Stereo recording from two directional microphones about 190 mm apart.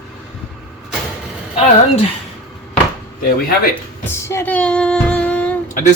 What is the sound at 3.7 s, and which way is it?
Speech, 10° left (ahead or behind).